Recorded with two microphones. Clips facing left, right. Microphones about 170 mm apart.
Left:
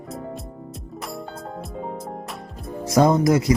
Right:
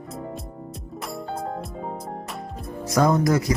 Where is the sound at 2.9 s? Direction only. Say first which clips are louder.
Left 3 dB; 25° left (ahead or behind).